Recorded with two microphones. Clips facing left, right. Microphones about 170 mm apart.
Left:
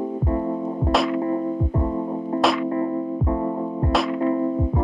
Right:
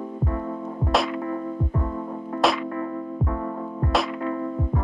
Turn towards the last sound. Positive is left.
turn(degrees=25)  # may be behind; listen again after turning